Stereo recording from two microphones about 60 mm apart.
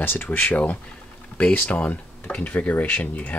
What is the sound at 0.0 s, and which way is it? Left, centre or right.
Speech, left.